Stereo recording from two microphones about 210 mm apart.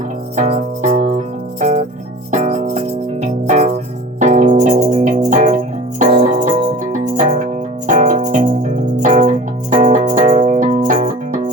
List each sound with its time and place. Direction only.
0.3 s music: 30° right (ahead or behind)